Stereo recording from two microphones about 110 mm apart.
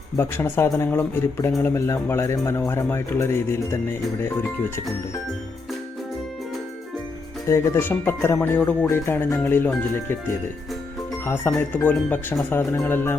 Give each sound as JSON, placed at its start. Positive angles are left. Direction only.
{"t": 0.2, "sound": "speech", "side_deg": 20}
{"t": 7.4, "sound": "speech", "side_deg": 25}
{"t": 11.5, "sound": "speech", "side_deg": 15}